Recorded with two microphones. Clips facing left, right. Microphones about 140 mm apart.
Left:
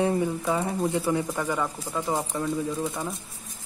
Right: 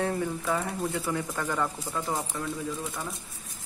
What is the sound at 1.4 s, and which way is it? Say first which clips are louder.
Speech: left 2 dB; 10° left (ahead or behind).